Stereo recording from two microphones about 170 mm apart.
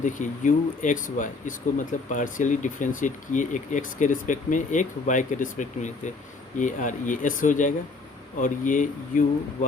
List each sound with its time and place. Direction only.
0.0 s speech: 50° left (ahead or behind)